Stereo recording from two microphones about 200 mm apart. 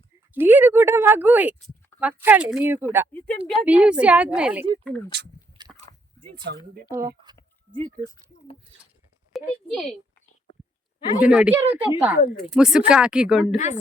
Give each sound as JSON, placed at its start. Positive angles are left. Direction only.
{"t": 0.3, "sound": "speech", "side_deg": -10}
{"t": 3.1, "sound": "speech", "side_deg": 5}
{"t": 3.7, "sound": "speech", "side_deg": -5}
{"t": 4.6, "sound": "speech", "side_deg": -25}
{"t": 5.6, "sound": "a sound", "side_deg": -20}
{"t": 6.3, "sound": "speech", "side_deg": -50}
{"t": 6.9, "sound": "speech", "side_deg": -15}
{"t": 9.3, "sound": "a woman's voice", "side_deg": 0}
{"t": 11.2, "sound": "speech", "side_deg": -5}